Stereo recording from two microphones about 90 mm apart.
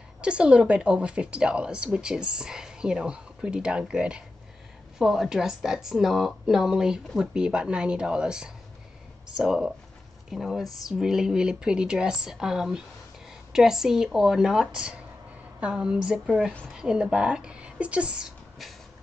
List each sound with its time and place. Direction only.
0.2 s speech: 10° right (ahead or behind)